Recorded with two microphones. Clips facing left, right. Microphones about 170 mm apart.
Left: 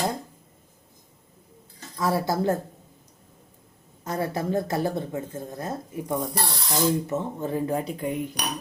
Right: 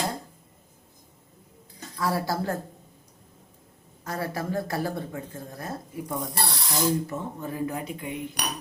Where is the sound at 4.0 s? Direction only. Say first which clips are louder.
Left 3 dB; 20° left (ahead or behind).